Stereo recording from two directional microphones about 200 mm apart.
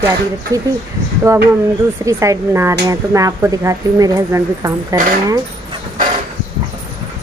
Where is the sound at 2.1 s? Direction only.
15° right (ahead or behind).